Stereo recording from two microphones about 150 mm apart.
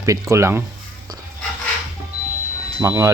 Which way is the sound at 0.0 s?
20° right (ahead or behind).